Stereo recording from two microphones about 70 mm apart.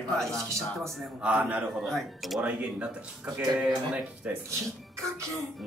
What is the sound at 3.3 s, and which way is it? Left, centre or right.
A man's voice, centre.